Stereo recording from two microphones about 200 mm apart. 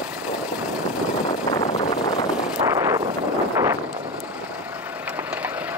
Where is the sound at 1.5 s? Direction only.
20° left (ahead or behind).